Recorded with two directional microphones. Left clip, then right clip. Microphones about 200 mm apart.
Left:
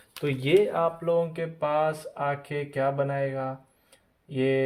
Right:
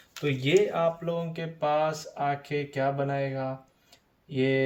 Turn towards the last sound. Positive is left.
turn(degrees=35)  # may be behind; listen again after turning